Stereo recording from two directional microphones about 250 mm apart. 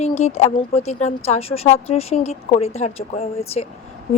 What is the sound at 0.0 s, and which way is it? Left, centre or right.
A woman's voice, left.